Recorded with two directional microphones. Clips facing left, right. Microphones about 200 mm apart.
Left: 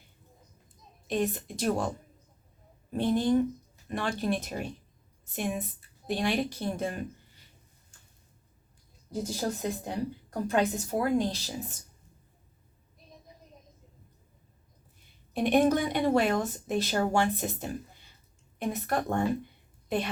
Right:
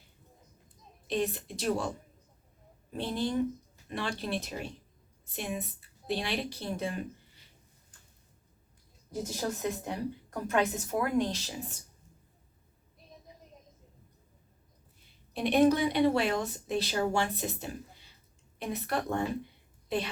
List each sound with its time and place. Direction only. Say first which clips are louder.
1.0 s a woman's voice: left 2 dB; 50° left (ahead or behind)
2.9 s a woman's voice: left 6 dB; 50° left (ahead or behind)
9.2 s a woman's voice: left 1 dB; 30° left (ahead or behind)
15.3 s a woman's voice: left 1 dB; 50° left (ahead or behind)